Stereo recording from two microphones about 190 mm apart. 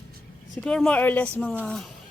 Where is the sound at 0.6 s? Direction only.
5° left (ahead or behind).